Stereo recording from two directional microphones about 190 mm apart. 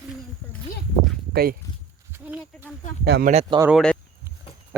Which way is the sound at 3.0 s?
60° right (ahead or behind).